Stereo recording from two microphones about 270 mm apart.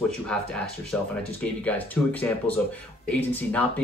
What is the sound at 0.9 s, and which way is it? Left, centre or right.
Speech, centre.